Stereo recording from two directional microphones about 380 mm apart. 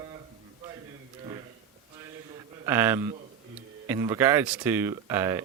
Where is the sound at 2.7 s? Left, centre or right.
Centre.